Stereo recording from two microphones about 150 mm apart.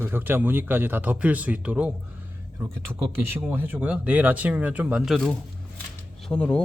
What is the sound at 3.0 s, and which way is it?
Speech, 15° right (ahead or behind).